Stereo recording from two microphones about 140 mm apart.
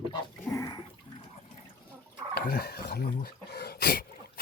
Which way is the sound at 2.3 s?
90° left.